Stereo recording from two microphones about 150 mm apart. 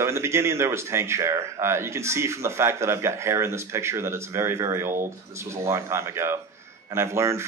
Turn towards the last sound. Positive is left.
turn(degrees=-20)  # may be behind; listen again after turning